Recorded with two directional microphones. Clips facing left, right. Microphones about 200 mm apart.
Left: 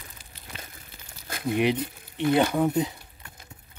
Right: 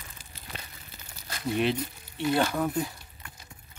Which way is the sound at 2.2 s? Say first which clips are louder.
Left 4 dB; 20° left (ahead or behind).